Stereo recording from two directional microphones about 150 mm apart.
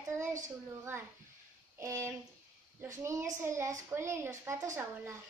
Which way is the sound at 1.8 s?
20° right (ahead or behind).